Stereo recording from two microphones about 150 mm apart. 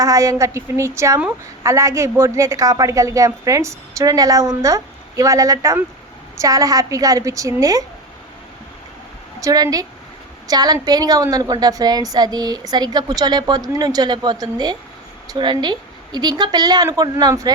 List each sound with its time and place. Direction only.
0.0 s a woman's voice: 20° right (ahead or behind)
9.4 s a woman's voice: 25° right (ahead or behind)